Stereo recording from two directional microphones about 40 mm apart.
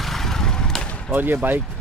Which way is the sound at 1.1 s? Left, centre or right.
Right.